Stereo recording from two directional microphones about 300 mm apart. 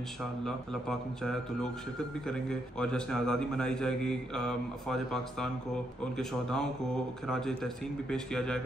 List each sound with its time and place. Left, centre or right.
0.5 s a man's voice: centre